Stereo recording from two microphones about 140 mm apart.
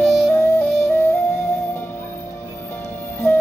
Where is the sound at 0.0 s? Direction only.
Centre (ahead or behind).